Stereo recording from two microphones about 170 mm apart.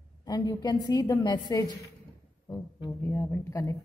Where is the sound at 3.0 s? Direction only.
15° left (ahead or behind).